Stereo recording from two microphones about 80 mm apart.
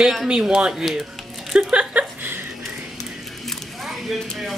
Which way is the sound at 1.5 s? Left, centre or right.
Centre.